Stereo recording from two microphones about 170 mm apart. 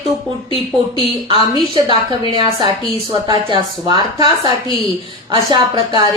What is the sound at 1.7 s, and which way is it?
A woman's voice, 30° right (ahead or behind).